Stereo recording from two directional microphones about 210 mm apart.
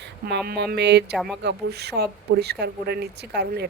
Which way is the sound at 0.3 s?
50° right (ahead or behind).